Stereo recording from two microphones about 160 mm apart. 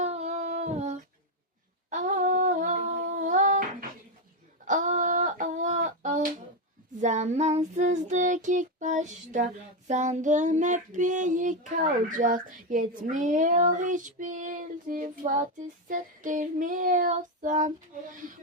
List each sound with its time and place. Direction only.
0.0 s humming: 45° right (ahead or behind)
4.6 s a sound: 55° right (ahead or behind)
7.0 s child singing: 45° right (ahead or behind)